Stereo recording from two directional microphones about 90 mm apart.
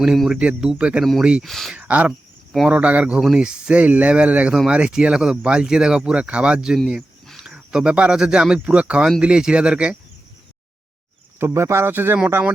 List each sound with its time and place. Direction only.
0.0 s speech: 5° right (ahead or behind)
1.5 s speech: centre (ahead or behind)
1.7 s speech: 15° right (ahead or behind)
11.3 s a man's voice: 30° right (ahead or behind)